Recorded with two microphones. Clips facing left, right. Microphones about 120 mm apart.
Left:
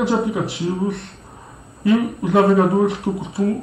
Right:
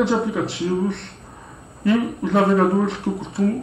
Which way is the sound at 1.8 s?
5° left (ahead or behind).